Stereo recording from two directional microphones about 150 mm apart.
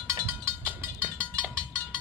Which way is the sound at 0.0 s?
20° right (ahead or behind).